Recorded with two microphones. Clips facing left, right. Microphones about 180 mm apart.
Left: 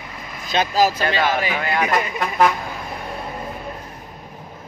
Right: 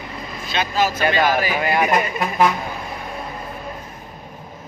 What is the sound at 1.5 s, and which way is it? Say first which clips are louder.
Speech: right 2 dB; 15° right (ahead or behind).